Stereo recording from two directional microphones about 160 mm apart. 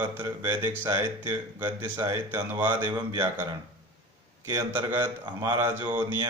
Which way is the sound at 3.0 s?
25° right (ahead or behind).